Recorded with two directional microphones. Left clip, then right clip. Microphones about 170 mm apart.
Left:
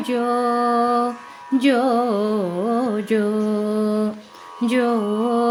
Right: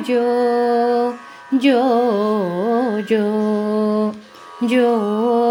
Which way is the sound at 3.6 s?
5° right (ahead or behind).